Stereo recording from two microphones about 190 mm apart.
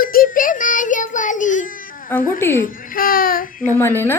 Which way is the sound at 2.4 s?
10° left (ahead or behind).